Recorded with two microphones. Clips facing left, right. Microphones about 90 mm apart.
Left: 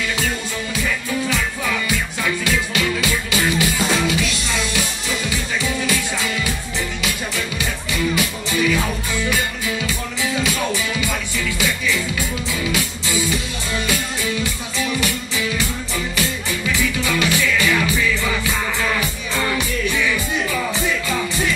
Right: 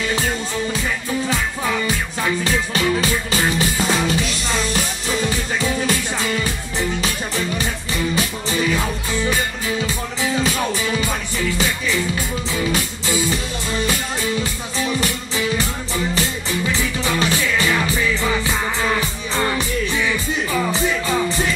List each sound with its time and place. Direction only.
1.3 s music: 35° right (ahead or behind)
14.8 s music: 35° right (ahead or behind)